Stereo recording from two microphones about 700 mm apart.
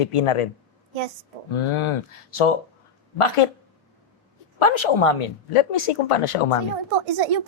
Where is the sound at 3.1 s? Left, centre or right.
Left.